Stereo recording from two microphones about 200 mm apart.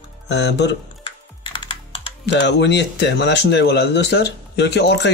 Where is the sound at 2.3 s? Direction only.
60° left (ahead or behind).